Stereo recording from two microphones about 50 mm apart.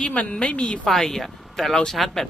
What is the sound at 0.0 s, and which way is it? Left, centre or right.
Speech, left.